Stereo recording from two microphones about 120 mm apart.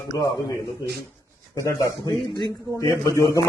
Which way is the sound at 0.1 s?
30° left (ahead or behind).